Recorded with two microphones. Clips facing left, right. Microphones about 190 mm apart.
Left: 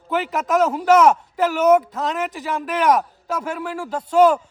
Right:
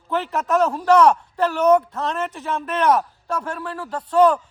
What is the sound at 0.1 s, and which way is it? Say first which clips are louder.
A man's voice: left 1 dB; 5° left (ahead or behind).